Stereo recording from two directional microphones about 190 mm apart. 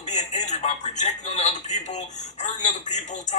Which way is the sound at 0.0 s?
40° left (ahead or behind).